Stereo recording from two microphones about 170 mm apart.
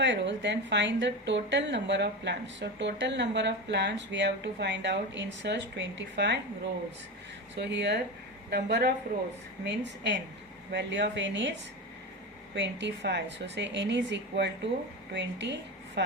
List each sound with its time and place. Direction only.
0.0 s a woman's voice: 90° right
7.5 s a woman's voice: 90° right
8.4 s a woman's voice: 75° right (ahead or behind)
9.6 s a woman's voice: 90° right
12.5 s a woman's voice: 90° right